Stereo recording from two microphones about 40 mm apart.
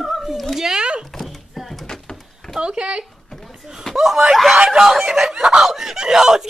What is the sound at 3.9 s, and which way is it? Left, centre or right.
Speech, centre.